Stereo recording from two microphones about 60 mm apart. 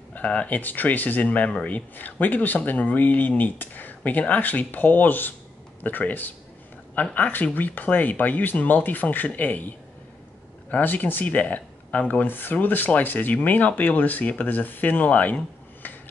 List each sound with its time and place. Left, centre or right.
0.1 s speech: left